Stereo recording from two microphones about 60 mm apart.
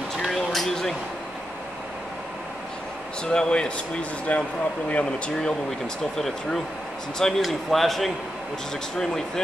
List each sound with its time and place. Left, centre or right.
0.2 s a sound: centre
3.3 s speech: centre
6.1 s speech: centre